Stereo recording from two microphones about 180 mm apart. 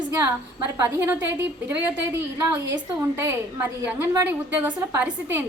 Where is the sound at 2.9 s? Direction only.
15° right (ahead or behind).